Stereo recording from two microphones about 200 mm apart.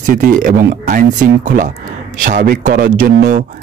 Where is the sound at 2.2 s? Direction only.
45° right (ahead or behind).